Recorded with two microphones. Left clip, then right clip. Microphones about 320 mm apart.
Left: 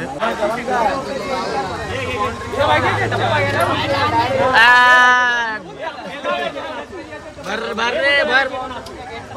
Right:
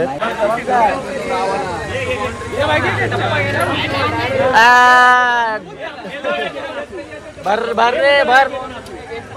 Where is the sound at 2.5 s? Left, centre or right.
Left.